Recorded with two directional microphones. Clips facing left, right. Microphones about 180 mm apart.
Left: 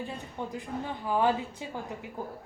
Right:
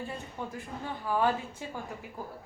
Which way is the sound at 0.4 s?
20° left (ahead or behind).